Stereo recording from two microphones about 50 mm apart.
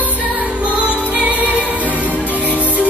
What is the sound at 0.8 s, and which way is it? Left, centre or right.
Music, right.